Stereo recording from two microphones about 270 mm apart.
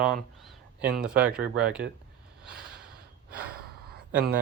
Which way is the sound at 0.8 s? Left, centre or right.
Centre.